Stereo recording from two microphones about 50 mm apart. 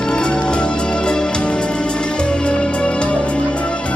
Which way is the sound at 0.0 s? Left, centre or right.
Centre.